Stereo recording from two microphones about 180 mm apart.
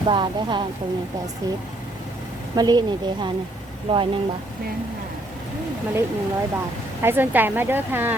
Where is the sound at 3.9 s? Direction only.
35° right (ahead or behind).